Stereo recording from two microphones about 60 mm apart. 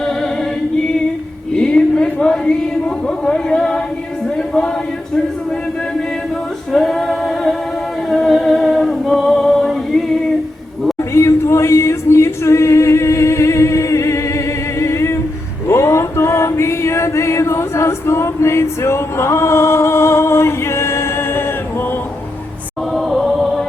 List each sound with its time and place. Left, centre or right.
1.5 s a sound: centre
6.7 s singing: centre
8.1 s music: centre
11.1 s singing: left
15.6 s chant: left
23.0 s music: centre